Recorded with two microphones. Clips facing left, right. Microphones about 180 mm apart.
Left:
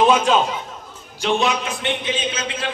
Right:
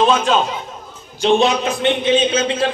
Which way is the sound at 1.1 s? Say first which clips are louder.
Right 6 dB; 25° right (ahead or behind).